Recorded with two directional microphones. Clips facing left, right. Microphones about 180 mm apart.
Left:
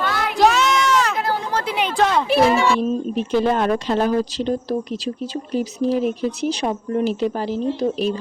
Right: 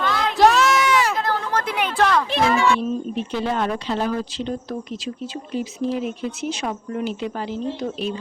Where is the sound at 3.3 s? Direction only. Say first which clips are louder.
Left 6 dB; 50° left (ahead or behind).